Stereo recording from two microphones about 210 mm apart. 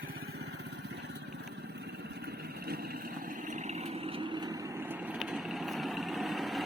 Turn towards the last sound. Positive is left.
turn(degrees=0)  # may be behind; listen again after turning